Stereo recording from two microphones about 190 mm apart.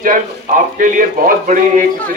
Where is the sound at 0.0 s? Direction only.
45° right (ahead or behind).